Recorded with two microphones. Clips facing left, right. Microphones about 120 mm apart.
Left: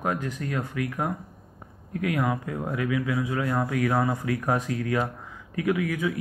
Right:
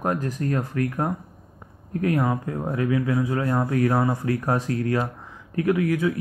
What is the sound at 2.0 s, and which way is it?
A man's voice, 30° right (ahead or behind).